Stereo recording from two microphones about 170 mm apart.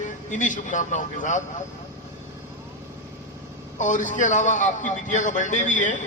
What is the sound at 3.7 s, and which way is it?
A man's voice, 45° left (ahead or behind).